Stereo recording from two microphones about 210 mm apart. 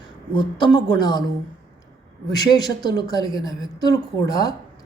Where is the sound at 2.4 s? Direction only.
20° left (ahead or behind).